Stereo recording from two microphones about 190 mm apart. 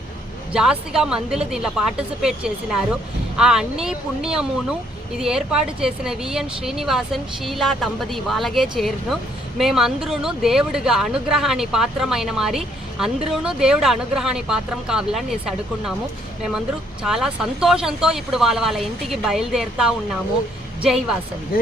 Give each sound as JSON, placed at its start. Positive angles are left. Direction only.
{"t": 0.5, "sound": "speech", "side_deg": -5}
{"t": 16.6, "sound": "speech", "side_deg": -5}
{"t": 21.5, "sound": "speech", "side_deg": 50}